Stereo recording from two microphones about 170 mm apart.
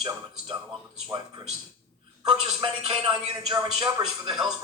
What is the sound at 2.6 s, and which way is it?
Speech, 30° right (ahead or behind).